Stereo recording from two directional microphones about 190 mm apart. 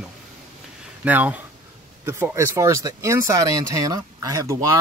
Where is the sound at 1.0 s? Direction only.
10° right (ahead or behind).